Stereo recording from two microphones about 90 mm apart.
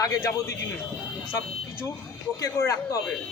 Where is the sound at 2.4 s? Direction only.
40° left (ahead or behind).